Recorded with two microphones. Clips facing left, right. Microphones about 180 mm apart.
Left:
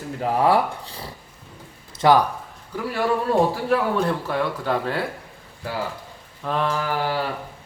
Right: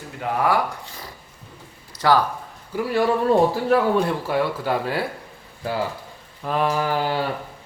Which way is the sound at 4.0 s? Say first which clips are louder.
Right 1 dB; 5° right (ahead or behind).